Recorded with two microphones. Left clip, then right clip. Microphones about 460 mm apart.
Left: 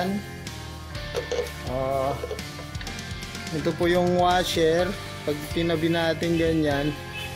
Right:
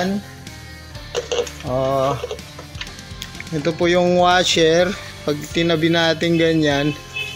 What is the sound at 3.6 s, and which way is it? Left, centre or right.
Speech, left.